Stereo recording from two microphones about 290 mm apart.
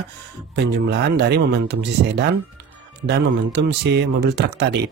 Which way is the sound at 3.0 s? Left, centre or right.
Right.